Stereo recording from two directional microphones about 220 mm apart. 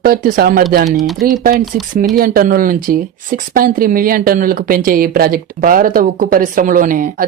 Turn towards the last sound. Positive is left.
turn(degrees=-40)  # may be behind; listen again after turning